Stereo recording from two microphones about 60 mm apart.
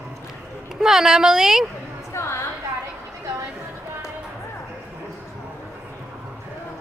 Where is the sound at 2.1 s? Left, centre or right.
Left.